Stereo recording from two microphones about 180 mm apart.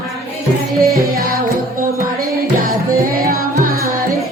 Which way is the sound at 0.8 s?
55° right (ahead or behind).